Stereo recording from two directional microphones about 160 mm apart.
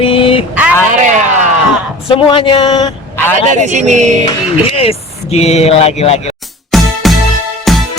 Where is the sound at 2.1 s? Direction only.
30° left (ahead or behind).